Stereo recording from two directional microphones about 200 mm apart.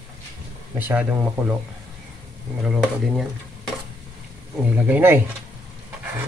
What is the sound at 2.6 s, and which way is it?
Speech, 5° right (ahead or behind).